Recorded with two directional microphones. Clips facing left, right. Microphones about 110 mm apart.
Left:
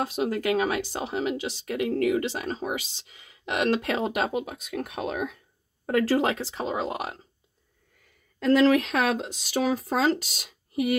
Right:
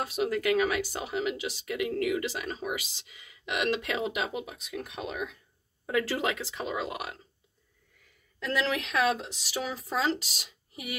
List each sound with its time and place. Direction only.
0.0 s speech: 30° left (ahead or behind)
8.4 s speech: 45° left (ahead or behind)
10.7 s a sound: 45° left (ahead or behind)